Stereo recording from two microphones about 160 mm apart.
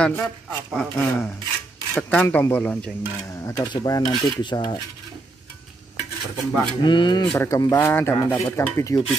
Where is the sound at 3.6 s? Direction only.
30° left (ahead or behind).